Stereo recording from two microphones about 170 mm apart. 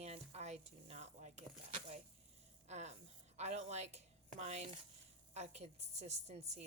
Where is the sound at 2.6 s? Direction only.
40° right (ahead or behind).